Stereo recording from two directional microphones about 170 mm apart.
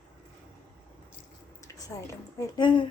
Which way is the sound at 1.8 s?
20° left (ahead or behind).